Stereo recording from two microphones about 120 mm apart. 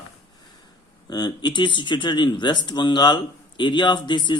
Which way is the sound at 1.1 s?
35° left (ahead or behind).